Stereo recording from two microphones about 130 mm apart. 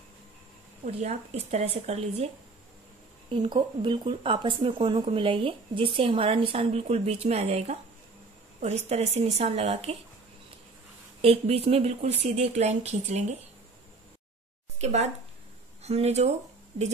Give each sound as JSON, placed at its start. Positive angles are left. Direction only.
{"t": 0.8, "sound": "speech", "side_deg": -55}
{"t": 3.3, "sound": "speech", "side_deg": -35}
{"t": 11.1, "sound": "speech", "side_deg": -50}
{"t": 14.8, "sound": "speech", "side_deg": -60}